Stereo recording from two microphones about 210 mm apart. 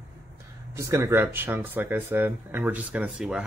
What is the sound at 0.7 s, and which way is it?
Speech, 15° right (ahead or behind).